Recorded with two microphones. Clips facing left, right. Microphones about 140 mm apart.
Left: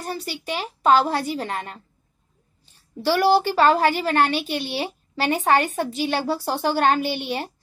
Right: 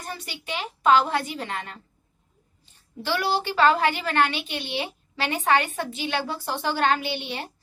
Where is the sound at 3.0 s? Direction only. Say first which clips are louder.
Left 8 dB; 40° left (ahead or behind).